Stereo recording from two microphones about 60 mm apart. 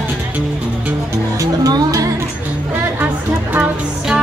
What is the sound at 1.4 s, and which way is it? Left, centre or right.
Music, right.